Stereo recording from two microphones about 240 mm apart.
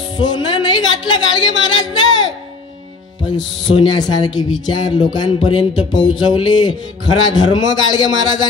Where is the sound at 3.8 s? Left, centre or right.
Centre.